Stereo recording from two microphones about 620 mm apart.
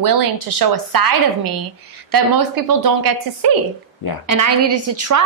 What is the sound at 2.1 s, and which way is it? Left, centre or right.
A woman's voice, right.